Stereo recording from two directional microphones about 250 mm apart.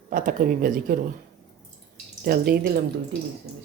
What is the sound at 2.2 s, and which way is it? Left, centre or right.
Speech, right.